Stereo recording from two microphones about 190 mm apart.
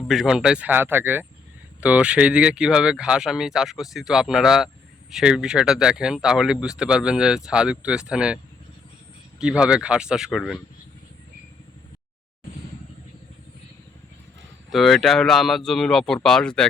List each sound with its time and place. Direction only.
0.1 s speech: 5° right (ahead or behind)
9.4 s speech: 5° right (ahead or behind)
14.7 s speech: centre (ahead or behind)